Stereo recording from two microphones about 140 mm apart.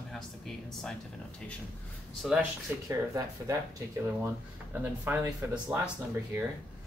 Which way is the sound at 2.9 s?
20° right (ahead or behind).